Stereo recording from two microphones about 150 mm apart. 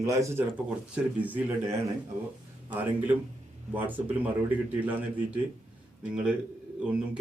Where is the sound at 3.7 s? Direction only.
10° right (ahead or behind).